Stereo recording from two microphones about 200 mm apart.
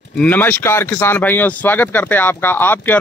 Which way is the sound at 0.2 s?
10° left (ahead or behind).